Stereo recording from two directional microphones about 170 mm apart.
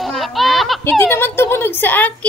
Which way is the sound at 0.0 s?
Centre (ahead or behind).